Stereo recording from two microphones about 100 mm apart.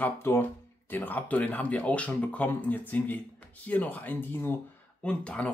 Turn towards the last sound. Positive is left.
turn(degrees=10)  # may be behind; listen again after turning